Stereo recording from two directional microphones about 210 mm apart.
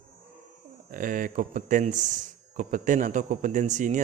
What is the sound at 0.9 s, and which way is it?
Speech, 40° right (ahead or behind).